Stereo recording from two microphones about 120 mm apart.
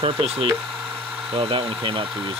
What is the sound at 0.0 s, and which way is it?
Speech, 50° right (ahead or behind).